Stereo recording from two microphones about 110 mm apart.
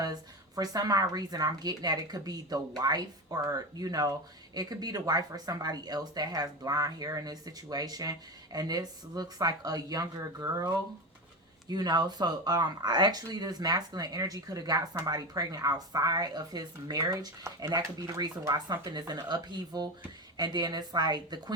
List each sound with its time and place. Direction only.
0.0 s speech: 35° right (ahead or behind)
11.7 s speech: 40° right (ahead or behind)